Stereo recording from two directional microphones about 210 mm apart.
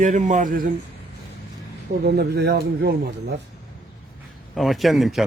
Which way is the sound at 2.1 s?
50° right (ahead or behind).